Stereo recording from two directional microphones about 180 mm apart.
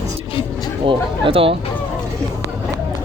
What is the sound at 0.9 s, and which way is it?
Speech, 30° right (ahead or behind).